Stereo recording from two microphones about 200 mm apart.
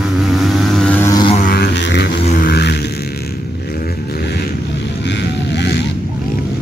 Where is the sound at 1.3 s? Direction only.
45° left (ahead or behind).